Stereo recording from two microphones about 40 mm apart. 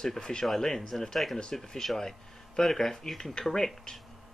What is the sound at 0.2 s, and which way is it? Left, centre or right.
Speech, centre.